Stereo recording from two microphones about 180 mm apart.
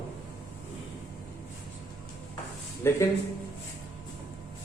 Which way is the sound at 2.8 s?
15° left (ahead or behind).